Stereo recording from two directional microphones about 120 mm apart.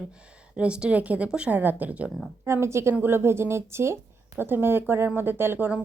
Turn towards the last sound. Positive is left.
turn(degrees=-15)  # may be behind; listen again after turning